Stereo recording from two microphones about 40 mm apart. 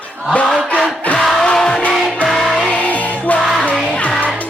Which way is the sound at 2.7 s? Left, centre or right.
Left.